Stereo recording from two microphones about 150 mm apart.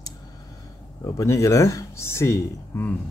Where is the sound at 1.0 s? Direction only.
20° left (ahead or behind).